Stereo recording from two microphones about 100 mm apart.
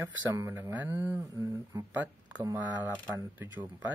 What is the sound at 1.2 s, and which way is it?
Speech, 35° right (ahead or behind).